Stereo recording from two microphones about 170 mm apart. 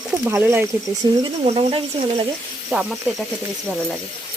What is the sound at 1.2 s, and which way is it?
Speech, 30° right (ahead or behind).